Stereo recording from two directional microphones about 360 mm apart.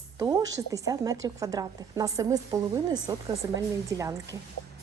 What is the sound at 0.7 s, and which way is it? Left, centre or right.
A woman's voice, centre.